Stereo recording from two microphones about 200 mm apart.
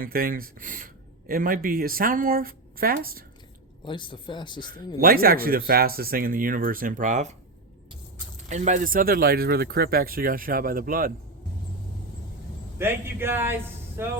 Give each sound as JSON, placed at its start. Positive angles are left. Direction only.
{"t": 0.0, "sound": "speech", "side_deg": -45}
{"t": 3.8, "sound": "speech", "side_deg": 25}
{"t": 4.9, "sound": "speech", "side_deg": -45}
{"t": 8.4, "sound": "speech", "side_deg": -35}
{"t": 12.8, "sound": "a man's voice", "side_deg": -10}